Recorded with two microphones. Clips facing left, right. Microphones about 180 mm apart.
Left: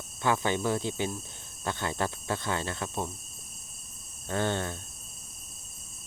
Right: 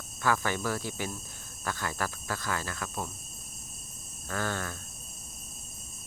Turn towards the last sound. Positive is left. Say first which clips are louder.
# left 4 dB
turn(degrees=25)  # may be behind; listen again after turning